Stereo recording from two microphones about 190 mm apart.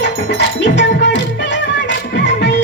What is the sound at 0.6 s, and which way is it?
Music, 65° left (ahead or behind).